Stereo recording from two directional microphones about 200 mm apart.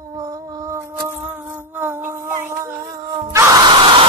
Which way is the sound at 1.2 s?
10° right (ahead or behind).